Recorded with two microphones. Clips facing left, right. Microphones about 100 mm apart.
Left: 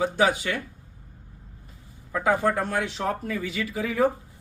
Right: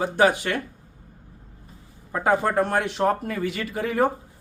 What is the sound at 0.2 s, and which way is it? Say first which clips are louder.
Speech: right 6 dB; 55° right (ahead or behind).